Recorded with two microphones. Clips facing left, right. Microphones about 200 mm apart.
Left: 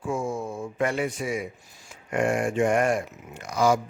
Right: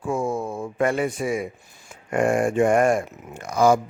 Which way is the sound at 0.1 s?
55° right (ahead or behind).